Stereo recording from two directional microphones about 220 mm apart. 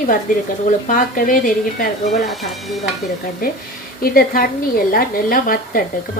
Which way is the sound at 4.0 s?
40° left (ahead or behind).